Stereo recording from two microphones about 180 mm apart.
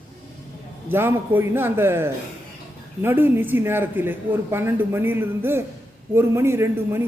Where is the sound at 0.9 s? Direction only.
10° right (ahead or behind).